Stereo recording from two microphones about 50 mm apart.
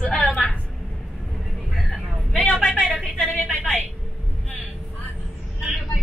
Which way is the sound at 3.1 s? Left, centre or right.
Left.